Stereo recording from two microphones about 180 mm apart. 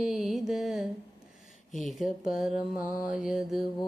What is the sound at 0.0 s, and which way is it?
Music, centre (ahead or behind).